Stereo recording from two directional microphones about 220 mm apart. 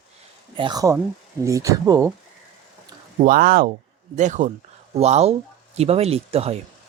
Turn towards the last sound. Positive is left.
turn(degrees=-25)  # may be behind; listen again after turning